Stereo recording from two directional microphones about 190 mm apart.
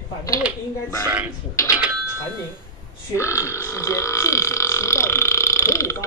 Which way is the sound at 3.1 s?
15° left (ahead or behind).